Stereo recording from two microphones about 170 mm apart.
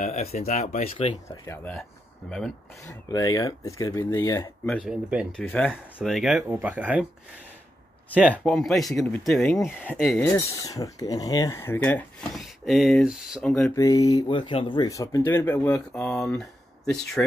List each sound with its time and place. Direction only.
0.0 s speech: 45° left (ahead or behind)
1.4 s speech: 15° left (ahead or behind)
2.8 s speech: 20° left (ahead or behind)
4.6 s speech: centre (ahead or behind)
8.1 s speech: 10° right (ahead or behind)
8.5 s speech: centre (ahead or behind)
12.4 s speech: centre (ahead or behind)
13.7 s speech: 20° left (ahead or behind); by 16.4 s centre (ahead or behind)